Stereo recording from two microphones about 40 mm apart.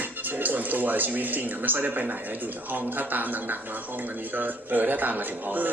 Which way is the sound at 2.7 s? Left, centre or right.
Right.